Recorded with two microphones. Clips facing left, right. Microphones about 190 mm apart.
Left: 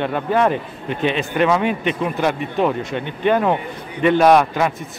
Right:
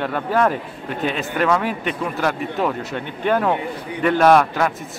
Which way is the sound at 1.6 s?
20° left (ahead or behind).